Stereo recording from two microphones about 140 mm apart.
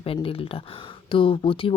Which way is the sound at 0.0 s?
40° left (ahead or behind).